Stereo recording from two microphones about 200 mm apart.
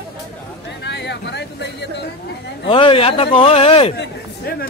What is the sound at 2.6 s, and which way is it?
Speech, 25° left (ahead or behind).